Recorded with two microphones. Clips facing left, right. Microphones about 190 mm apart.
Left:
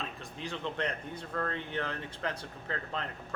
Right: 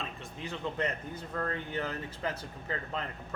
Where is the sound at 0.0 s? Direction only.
Centre (ahead or behind).